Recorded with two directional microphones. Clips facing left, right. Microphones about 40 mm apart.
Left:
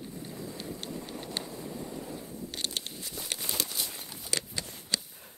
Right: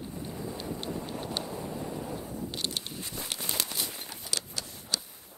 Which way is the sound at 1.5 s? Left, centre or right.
Right.